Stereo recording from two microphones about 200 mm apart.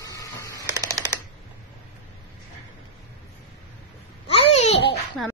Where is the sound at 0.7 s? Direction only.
20° right (ahead or behind).